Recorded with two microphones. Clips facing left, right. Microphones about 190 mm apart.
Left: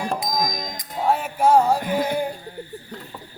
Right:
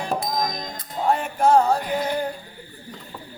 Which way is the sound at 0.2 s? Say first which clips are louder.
Even; 10° left (ahead or behind).